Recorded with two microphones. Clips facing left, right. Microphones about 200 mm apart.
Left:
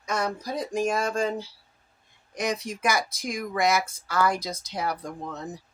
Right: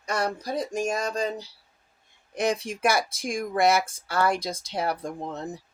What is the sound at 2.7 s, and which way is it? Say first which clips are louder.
Speech: right 2 dB; 55° right (ahead or behind).